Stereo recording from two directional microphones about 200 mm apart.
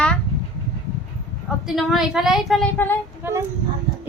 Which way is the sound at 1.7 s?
Centre (ahead or behind).